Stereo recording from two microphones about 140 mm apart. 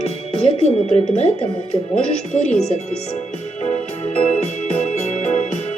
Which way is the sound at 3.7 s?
45° left (ahead or behind).